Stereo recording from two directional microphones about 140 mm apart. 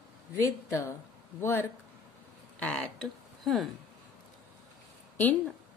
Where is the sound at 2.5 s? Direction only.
5° left (ahead or behind).